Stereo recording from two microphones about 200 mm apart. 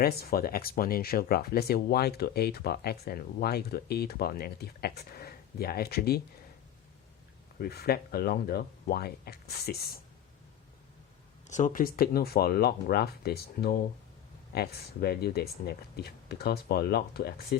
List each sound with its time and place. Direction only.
0.0 s speech: 50° left (ahead or behind)
7.6 s speech: 50° left (ahead or behind)
11.4 s speech: 35° left (ahead or behind)